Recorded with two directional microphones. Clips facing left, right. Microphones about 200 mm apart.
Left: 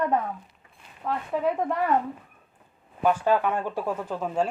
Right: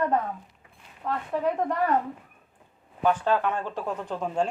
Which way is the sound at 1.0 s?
5° left (ahead or behind).